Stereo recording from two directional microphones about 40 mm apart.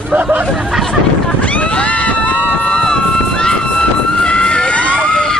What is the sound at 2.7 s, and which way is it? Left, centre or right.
Vehicle, centre.